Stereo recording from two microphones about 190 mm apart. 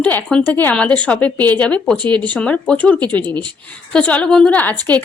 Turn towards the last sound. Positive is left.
turn(degrees=10)  # may be behind; listen again after turning